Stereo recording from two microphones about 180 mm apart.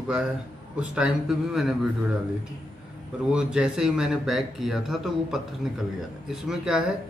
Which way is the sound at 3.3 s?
5° right (ahead or behind).